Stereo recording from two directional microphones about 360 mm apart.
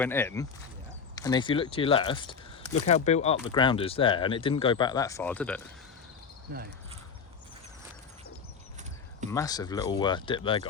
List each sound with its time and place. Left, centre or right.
0.0 s speech: centre
6.5 s speech: right
9.3 s speech: centre